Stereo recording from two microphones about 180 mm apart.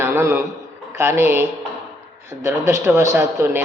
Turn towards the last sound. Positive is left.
turn(degrees=-15)  # may be behind; listen again after turning